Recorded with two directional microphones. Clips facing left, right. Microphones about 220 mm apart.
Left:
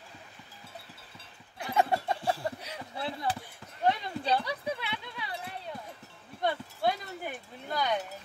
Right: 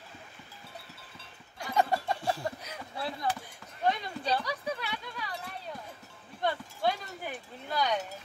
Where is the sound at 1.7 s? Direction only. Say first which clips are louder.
Left 1 dB; 20° left (ahead or behind).